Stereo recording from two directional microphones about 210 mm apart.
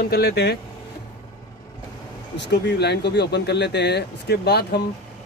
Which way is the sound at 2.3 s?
55° left (ahead or behind).